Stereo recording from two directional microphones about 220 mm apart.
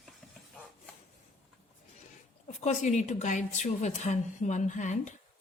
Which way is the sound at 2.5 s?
30° left (ahead or behind).